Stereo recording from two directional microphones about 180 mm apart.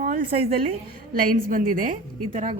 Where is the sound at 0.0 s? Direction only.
50° right (ahead or behind).